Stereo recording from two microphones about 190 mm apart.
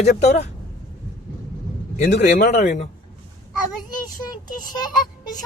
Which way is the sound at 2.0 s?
60° left (ahead or behind).